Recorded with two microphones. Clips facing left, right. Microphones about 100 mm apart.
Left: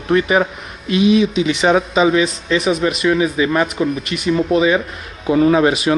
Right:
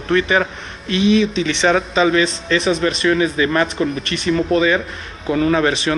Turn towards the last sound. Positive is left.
turn(degrees=20)  # may be behind; listen again after turning